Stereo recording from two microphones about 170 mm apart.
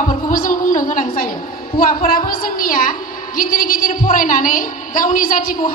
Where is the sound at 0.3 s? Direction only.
55° left (ahead or behind).